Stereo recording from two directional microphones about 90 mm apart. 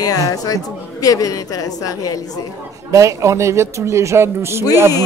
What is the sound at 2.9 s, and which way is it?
A man's voice, 35° right (ahead or behind).